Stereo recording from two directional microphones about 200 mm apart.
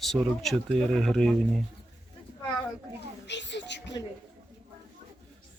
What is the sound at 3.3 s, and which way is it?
Speech, 60° left (ahead or behind).